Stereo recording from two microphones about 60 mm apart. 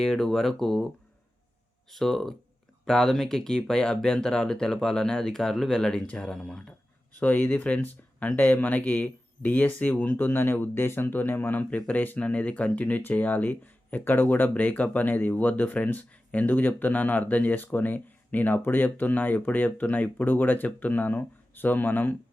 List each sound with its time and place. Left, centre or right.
0.0 s speech: centre
1.9 s speech: centre; by 22.2 s left